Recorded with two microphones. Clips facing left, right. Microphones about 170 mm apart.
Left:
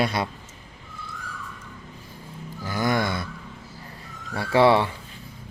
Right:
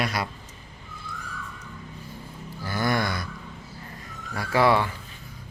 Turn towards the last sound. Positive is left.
turn(degrees=30)  # may be behind; listen again after turning